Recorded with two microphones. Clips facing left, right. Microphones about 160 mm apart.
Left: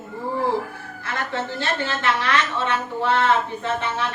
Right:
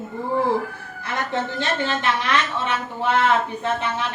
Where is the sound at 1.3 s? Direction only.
15° right (ahead or behind).